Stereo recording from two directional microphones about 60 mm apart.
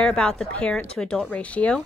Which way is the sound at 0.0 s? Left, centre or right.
Centre.